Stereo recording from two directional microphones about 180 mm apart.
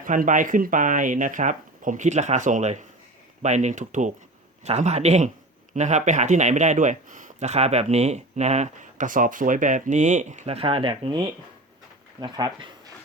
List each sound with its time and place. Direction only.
0.0 s speech: 45° right (ahead or behind); by 11.2 s 30° right (ahead or behind)
12.2 s speech: 25° right (ahead or behind)